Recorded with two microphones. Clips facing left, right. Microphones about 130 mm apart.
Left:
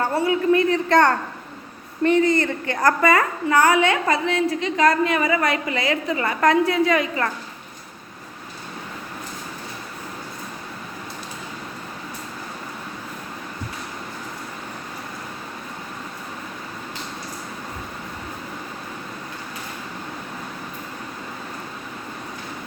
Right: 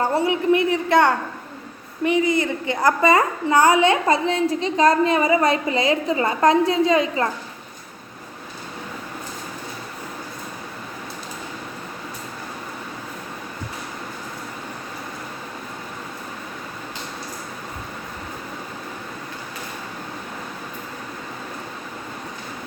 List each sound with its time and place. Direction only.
0.0 s a woman's voice: 15° right (ahead or behind)